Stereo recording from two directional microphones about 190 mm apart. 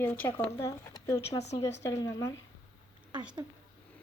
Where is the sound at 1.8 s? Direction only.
15° left (ahead or behind).